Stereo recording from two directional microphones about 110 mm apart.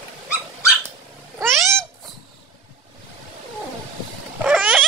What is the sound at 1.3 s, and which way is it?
Cat, 25° right (ahead or behind).